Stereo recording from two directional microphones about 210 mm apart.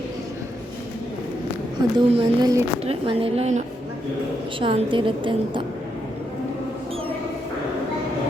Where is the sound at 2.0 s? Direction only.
25° right (ahead or behind).